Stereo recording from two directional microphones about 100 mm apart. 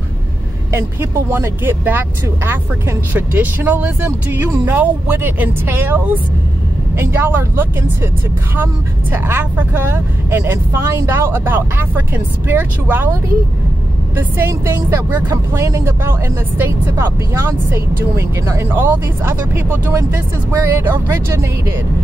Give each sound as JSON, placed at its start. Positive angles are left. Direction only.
{"t": 1.3, "sound": "speech", "side_deg": -20}
{"t": 9.1, "sound": "speech", "side_deg": -20}
{"t": 14.1, "sound": "speech", "side_deg": -20}